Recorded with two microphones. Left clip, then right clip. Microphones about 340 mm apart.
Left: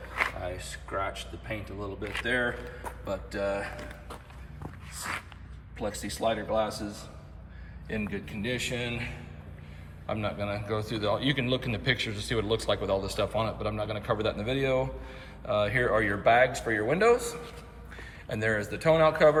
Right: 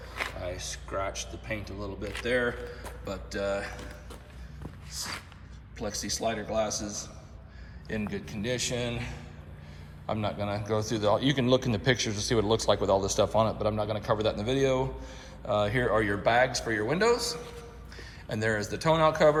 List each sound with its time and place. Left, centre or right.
0.1 s a man's voice: centre